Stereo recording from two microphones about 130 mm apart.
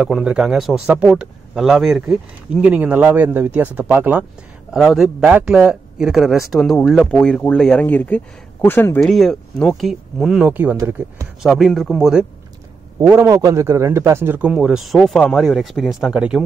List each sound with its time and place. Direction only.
0.0 s speech: 5° right (ahead or behind)
4.7 s speech: centre (ahead or behind); by 9.0 s 15° left (ahead or behind)
9.0 s speech: centre (ahead or behind); by 11.2 s 20° right (ahead or behind)
11.4 s speech: centre (ahead or behind)
13.0 s speech: 20° right (ahead or behind)